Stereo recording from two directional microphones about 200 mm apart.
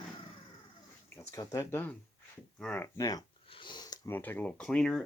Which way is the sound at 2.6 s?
10° left (ahead or behind).